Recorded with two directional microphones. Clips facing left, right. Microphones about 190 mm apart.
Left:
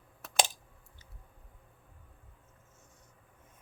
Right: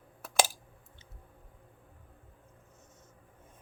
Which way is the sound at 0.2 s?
5° right (ahead or behind).